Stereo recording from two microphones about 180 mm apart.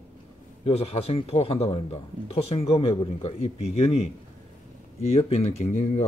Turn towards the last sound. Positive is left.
turn(degrees=40)  # may be behind; listen again after turning